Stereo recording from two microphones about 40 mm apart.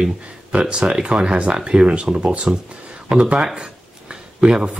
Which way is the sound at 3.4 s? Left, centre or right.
Right.